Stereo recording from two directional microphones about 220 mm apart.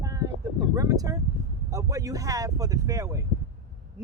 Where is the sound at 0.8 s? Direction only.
15° right (ahead or behind).